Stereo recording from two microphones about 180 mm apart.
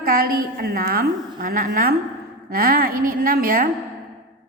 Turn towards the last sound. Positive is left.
turn(degrees=-55)  # may be behind; listen again after turning